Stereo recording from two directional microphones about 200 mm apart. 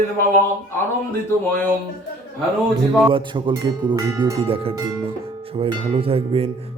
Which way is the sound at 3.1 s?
25° right (ahead or behind).